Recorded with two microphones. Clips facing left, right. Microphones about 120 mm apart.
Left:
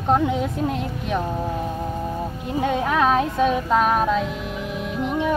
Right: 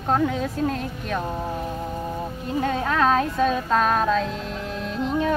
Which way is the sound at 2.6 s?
15° left (ahead or behind).